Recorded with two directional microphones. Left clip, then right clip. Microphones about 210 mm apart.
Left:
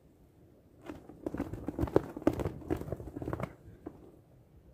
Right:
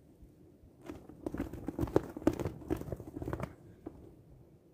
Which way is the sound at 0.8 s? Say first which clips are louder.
Left 2 dB; 10° right (ahead or behind).